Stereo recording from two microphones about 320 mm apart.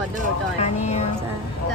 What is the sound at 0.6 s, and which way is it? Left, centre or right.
Speech, centre.